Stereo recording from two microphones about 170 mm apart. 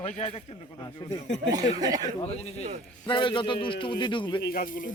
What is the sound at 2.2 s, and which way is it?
Speech, 40° left (ahead or behind).